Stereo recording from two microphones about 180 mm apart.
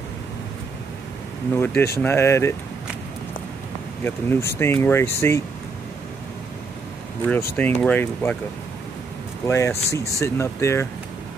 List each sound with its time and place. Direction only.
1.5 s speech: 10° left (ahead or behind)
4.0 s speech: 10° left (ahead or behind)
7.5 s speech: 10° left (ahead or behind)
9.5 s speech: 15° left (ahead or behind)